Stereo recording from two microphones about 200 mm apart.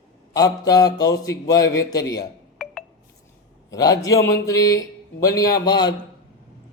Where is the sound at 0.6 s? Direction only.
20° left (ahead or behind).